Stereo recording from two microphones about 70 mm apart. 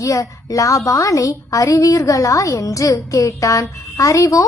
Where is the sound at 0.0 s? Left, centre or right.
Left.